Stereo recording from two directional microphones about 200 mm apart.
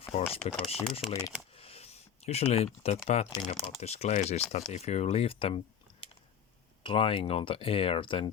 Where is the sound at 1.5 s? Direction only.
30° left (ahead or behind).